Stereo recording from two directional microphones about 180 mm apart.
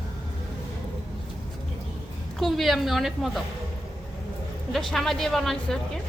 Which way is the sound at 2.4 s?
Centre (ahead or behind).